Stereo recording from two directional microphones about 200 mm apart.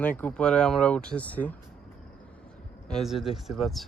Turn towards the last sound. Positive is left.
turn(degrees=0)  # may be behind; listen again after turning